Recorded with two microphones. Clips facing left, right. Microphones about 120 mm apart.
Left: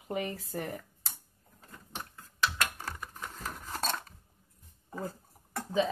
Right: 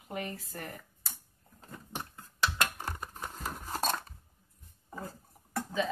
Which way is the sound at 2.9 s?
30° right (ahead or behind).